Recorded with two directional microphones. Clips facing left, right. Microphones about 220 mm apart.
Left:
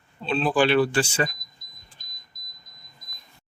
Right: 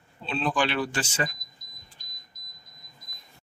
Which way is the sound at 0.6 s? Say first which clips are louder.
Left 10 dB; 35° left (ahead or behind).